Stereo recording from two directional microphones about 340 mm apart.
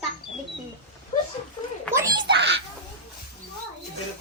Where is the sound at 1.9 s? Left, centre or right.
Centre.